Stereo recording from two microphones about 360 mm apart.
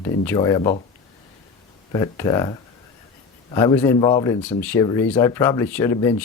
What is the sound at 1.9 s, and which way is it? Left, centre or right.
Speech, centre.